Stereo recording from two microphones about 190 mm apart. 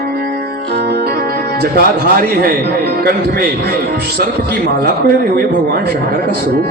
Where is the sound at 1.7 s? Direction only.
55° right (ahead or behind).